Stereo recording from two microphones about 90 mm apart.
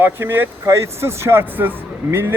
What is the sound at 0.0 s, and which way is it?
Speech, 25° right (ahead or behind).